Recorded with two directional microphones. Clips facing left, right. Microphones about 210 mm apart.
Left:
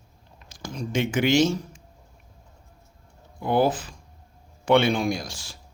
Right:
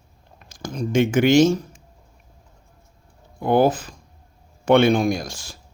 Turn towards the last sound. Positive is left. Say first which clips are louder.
# right 4 dB
turn(degrees=-45)  # may be behind; listen again after turning